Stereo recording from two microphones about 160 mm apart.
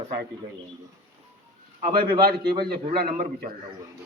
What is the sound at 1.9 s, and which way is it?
A man's voice, 70° right (ahead or behind).